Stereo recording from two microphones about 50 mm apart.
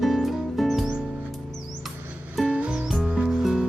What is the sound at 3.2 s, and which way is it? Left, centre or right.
Music, centre.